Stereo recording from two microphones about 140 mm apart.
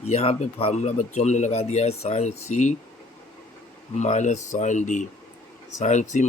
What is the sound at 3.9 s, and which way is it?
Speech, 55° left (ahead or behind).